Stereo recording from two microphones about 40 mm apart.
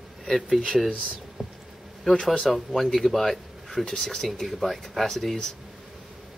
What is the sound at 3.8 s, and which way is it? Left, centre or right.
Speech, centre.